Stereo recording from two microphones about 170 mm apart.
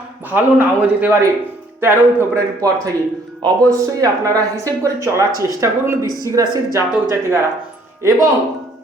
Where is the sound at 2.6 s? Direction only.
20° right (ahead or behind).